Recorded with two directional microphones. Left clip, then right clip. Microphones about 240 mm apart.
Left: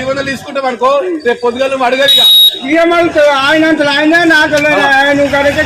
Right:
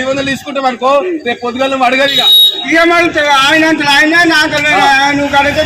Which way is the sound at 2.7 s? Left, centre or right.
Right.